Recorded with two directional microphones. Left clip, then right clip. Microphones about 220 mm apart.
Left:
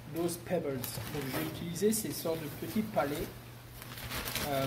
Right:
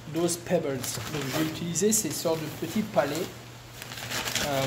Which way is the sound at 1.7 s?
25° right (ahead or behind).